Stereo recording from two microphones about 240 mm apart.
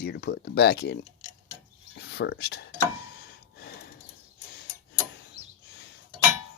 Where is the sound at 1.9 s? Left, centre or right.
Left.